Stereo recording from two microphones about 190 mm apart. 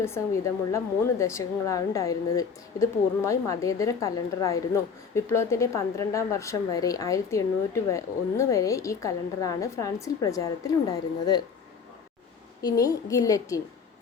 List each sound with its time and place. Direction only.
0.0 s a woman's voice: 15° left (ahead or behind)
12.6 s a woman's voice: 20° left (ahead or behind)